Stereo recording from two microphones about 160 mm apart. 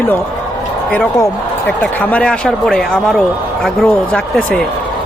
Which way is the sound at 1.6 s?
10° left (ahead or behind).